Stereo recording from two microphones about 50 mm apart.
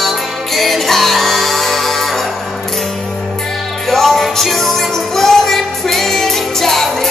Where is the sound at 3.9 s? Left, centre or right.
Centre.